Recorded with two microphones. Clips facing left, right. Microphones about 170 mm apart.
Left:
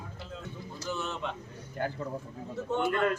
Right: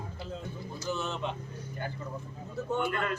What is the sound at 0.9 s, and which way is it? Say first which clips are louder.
Speech: right 1 dB; 15° right (ahead or behind).